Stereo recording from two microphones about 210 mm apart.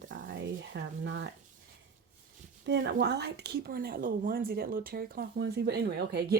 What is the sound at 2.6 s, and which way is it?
A woman's voice, 55° right (ahead or behind).